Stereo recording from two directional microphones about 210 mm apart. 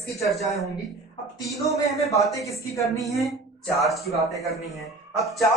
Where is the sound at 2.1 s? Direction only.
15° left (ahead or behind).